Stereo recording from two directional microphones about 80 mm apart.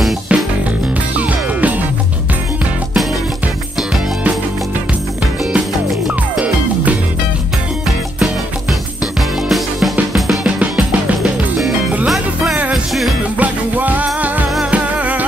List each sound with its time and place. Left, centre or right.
0.3 s music: centre
5.9 s music: centre
9.5 s music: centre
10.8 s music: centre
13.4 s music: right